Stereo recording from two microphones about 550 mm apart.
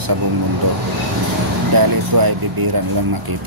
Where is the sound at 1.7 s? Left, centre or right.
Right.